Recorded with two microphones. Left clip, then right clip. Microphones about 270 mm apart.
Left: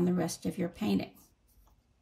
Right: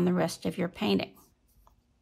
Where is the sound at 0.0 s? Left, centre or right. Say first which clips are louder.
Right 4 dB; centre.